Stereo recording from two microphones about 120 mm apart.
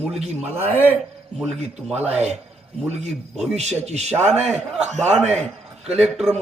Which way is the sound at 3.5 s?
65° right (ahead or behind).